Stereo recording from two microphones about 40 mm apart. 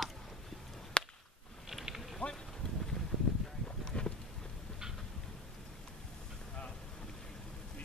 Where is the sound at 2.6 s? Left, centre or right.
Centre.